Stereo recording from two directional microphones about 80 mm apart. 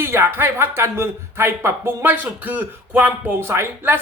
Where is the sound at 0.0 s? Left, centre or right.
Right.